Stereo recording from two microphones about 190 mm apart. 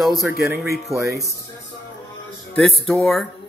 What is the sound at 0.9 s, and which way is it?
Speech, 15° right (ahead or behind).